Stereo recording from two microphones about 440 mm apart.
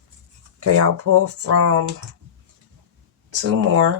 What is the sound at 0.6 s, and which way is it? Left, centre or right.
Speech, right.